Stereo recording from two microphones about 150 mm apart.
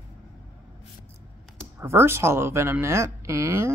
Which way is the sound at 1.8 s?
15° right (ahead or behind).